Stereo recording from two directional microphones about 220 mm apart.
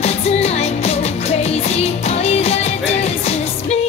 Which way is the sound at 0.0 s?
30° left (ahead or behind).